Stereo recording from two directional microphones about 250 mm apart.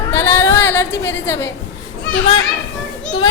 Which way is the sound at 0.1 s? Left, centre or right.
Centre.